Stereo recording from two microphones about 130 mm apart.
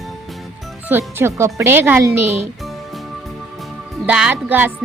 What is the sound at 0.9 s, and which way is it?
Speech, 20° right (ahead or behind).